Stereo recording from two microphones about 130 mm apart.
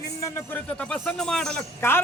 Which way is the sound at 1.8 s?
15° left (ahead or behind).